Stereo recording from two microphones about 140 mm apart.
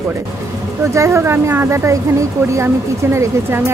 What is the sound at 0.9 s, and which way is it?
Speech, 20° right (ahead or behind).